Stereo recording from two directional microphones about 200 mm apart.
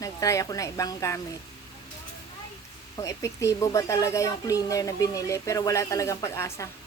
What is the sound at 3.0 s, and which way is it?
Speech, 15° left (ahead or behind).